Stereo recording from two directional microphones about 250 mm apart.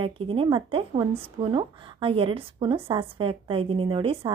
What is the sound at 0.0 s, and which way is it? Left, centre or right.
A woman's voice, right.